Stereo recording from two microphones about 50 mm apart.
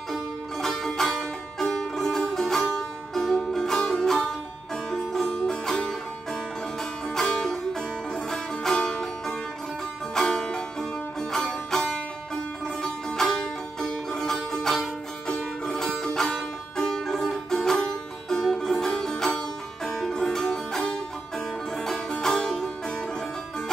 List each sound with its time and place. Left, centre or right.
0.1 s music: centre
7.2 s music: centre
10.1 s music: centre